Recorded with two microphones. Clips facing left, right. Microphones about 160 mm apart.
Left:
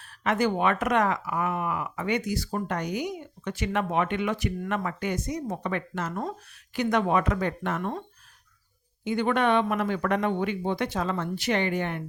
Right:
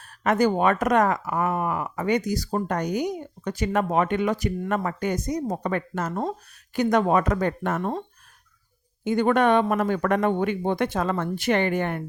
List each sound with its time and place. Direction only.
0.0 s speech: 45° right (ahead or behind)
9.0 s speech: 45° right (ahead or behind)